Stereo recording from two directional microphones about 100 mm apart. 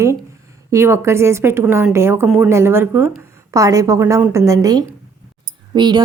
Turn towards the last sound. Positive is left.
turn(degrees=-50)  # may be behind; listen again after turning